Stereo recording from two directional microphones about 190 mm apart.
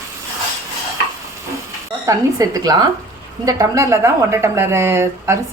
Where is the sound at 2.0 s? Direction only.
20° right (ahead or behind).